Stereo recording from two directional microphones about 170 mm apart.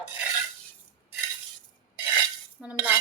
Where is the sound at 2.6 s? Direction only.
5° right (ahead or behind).